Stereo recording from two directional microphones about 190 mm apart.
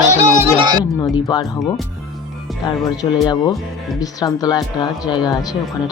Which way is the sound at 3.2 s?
20° left (ahead or behind).